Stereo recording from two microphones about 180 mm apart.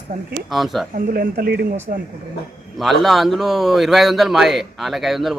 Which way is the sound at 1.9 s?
45° right (ahead or behind).